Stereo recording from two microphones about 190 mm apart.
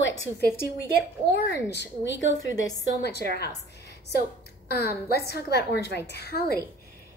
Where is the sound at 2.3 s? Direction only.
20° left (ahead or behind).